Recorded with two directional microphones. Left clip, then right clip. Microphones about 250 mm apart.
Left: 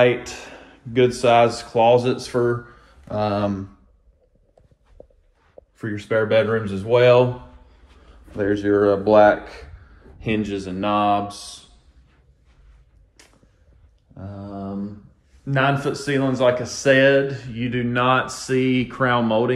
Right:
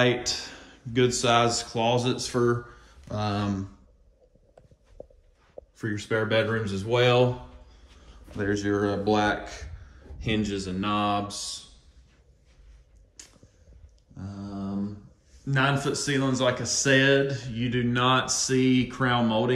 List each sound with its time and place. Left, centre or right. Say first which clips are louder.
0.0 s a man's voice: left 6 dB; centre
5.0 s walk: right 1 dB; left
5.8 s speech: left 6 dB; centre
8.4 s a man's voice: left 8 dB; centre
13.2 s a sound: right 1 dB; centre
14.1 s a man's voice: left 5 dB; centre